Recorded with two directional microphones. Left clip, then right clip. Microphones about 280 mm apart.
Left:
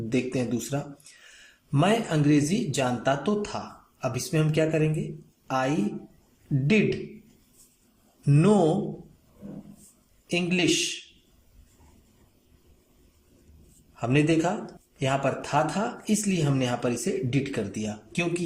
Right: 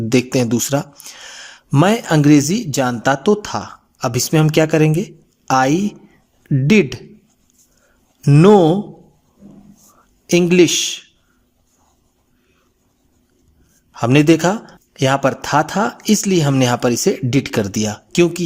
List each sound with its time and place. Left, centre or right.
0.1 s a woman's voice: right
8.2 s speech: right
10.2 s speech: right
13.9 s a man's voice: right